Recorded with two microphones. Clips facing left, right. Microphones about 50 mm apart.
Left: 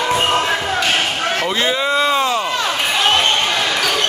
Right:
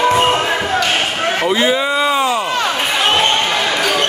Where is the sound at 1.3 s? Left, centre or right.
Centre.